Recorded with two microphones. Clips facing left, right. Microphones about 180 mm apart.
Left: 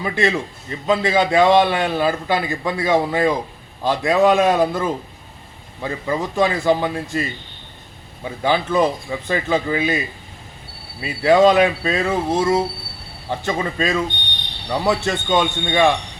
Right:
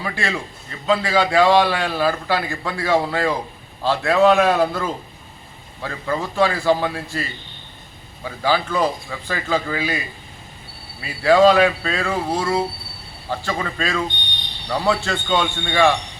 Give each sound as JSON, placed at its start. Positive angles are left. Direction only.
{"t": 0.0, "sound": "a man's voice", "side_deg": 20}
{"t": 11.0, "sound": "a man's voice", "side_deg": 20}